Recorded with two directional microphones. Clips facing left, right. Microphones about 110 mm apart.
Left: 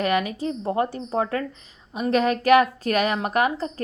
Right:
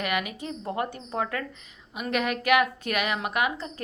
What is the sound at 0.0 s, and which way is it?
A woman's voice, 35° left (ahead or behind).